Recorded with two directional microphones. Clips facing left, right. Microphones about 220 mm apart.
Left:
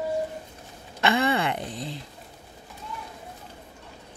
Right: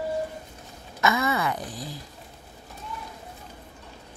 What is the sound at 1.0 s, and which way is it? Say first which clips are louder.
Speech: left 2 dB; 30° left (ahead or behind).